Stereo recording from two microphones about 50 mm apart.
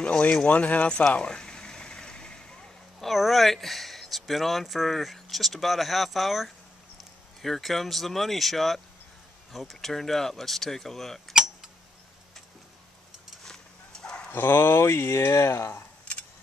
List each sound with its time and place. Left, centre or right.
0.5 s speech: left
1.1 s vehicle: centre
3.1 s speech: centre
13.4 s dog: centre
14.3 s speech: left